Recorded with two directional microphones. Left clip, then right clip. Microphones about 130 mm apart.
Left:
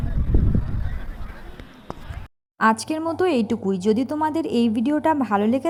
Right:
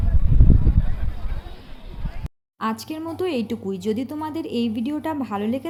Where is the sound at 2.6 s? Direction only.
30° left (ahead or behind).